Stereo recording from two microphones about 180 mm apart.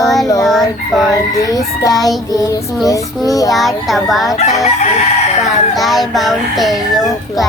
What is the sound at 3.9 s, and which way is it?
Speech, centre (ahead or behind).